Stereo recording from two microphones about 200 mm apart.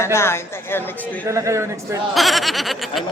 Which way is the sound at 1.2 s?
15° right (ahead or behind).